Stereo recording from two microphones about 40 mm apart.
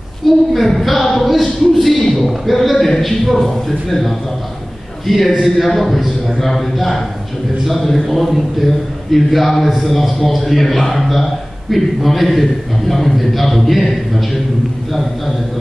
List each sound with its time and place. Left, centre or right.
0.5 s a man's voice: centre